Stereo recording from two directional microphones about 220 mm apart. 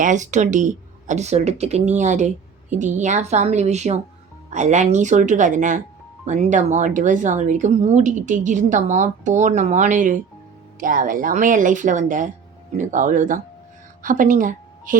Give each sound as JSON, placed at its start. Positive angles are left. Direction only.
{"t": 0.0, "sound": "a woman's voice", "side_deg": -35}